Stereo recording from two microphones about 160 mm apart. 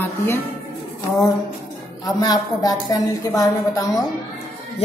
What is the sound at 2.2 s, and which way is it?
A woman's voice, 25° left (ahead or behind).